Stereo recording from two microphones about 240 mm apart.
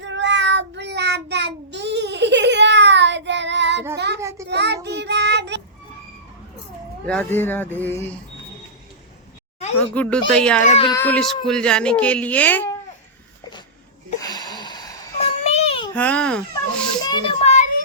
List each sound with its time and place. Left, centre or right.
0.0 s child singing: right
4.2 s child singing: centre
4.5 s child singing: right
7.1 s speech: centre
9.9 s speech: centre
10.6 s speech: left
10.8 s speech: centre
14.2 s a sound: centre
16.0 s speech: centre
17.0 s a sound: left